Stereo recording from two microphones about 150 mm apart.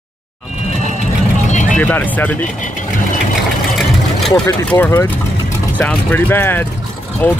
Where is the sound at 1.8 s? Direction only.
10° left (ahead or behind).